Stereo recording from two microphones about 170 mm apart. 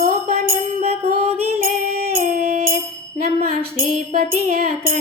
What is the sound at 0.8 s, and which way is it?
Music, 35° right (ahead or behind).